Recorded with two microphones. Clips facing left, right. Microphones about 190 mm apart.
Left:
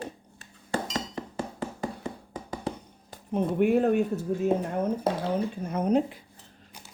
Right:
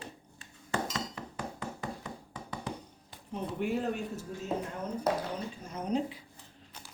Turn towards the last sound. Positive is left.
turn(degrees=55)  # may be behind; listen again after turning